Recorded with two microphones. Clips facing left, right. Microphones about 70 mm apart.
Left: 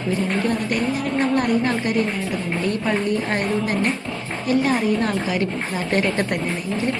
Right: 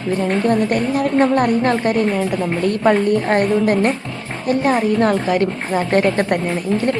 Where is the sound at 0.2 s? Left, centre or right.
Right.